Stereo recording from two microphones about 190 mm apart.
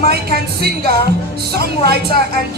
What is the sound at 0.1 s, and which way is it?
Speech, 55° right (ahead or behind).